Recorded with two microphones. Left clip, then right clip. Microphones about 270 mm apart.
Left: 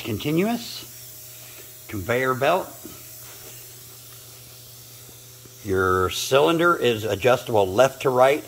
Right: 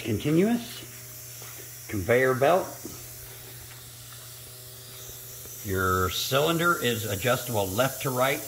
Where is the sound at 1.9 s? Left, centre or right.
Centre.